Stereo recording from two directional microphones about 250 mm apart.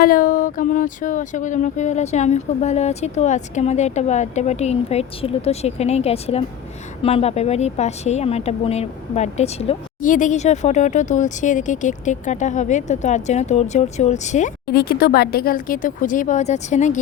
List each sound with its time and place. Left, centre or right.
0.0 s speech: left